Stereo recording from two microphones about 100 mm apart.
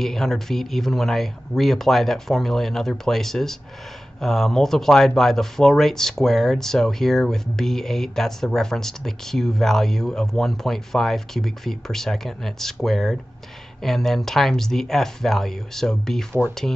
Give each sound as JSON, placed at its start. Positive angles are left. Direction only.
{"t": 0.0, "sound": "speech", "side_deg": 5}